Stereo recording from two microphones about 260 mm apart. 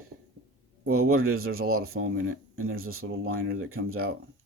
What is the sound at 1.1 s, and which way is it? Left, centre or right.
Speech, right.